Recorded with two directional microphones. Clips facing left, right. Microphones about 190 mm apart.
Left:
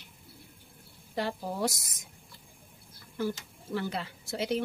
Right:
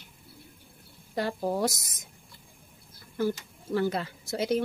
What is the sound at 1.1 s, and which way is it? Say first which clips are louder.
Speech: right 4 dB; 45° right (ahead or behind).